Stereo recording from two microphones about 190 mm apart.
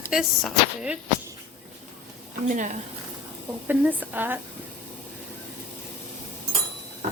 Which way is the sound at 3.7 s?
10° right (ahead or behind).